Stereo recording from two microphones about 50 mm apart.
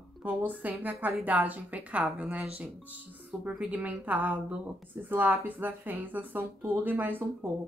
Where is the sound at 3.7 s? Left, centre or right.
Right.